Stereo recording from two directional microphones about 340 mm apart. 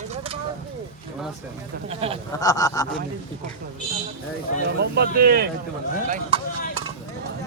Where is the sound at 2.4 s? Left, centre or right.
Centre.